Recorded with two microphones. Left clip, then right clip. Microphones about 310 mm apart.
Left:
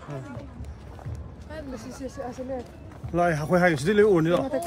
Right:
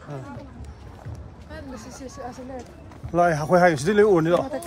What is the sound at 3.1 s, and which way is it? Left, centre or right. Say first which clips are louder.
Speech: right 4 dB; centre.